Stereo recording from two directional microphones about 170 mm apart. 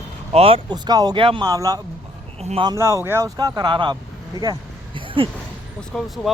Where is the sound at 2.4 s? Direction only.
40° right (ahead or behind).